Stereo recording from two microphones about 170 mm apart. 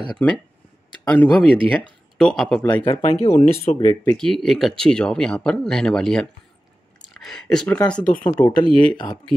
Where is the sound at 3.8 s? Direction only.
20° left (ahead or behind).